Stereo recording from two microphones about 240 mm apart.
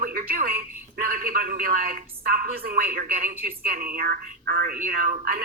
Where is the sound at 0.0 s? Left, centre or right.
Right.